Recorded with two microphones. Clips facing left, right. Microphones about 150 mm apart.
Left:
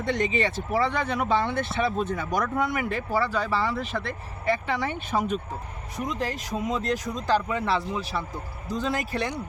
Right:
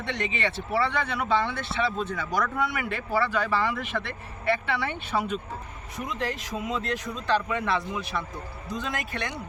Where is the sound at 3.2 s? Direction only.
35° left (ahead or behind).